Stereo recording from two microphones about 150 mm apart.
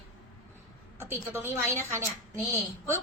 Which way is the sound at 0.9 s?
15° right (ahead or behind).